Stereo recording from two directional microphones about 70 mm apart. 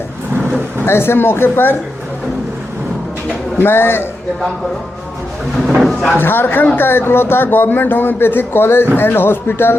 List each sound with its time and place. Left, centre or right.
0.9 s speech: left
3.6 s speech: left
5.6 s speech: centre
6.1 s speech: left